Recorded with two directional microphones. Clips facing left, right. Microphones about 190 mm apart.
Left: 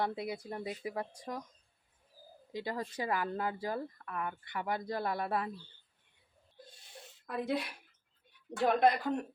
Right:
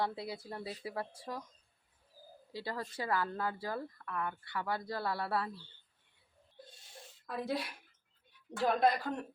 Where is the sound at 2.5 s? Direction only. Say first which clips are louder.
Left 3 dB; 20° left (ahead or behind).